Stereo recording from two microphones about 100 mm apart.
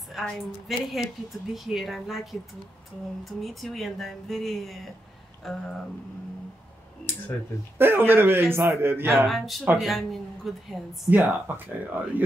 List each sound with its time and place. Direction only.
0.1 s a woman's voice: centre (ahead or behind)
3.3 s a woman's voice: centre (ahead or behind)
7.7 s speech: 20° right (ahead or behind)
9.8 s a woman's voice: centre (ahead or behind)
11.1 s speech: 20° right (ahead or behind)